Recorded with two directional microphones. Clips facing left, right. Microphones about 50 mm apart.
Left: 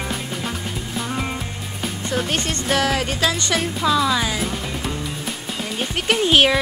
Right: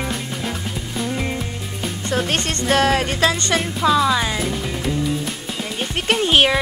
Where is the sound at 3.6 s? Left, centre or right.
Centre.